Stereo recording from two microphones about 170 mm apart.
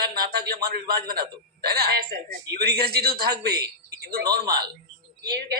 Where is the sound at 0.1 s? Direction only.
65° right (ahead or behind).